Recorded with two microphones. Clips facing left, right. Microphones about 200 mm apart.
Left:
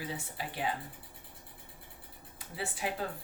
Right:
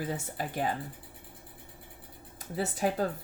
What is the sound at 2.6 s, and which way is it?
Speech, 45° right (ahead or behind).